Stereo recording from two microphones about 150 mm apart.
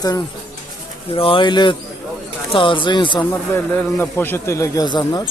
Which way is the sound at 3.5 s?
15° left (ahead or behind).